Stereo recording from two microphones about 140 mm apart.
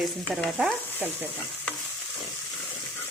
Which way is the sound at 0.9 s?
10° right (ahead or behind).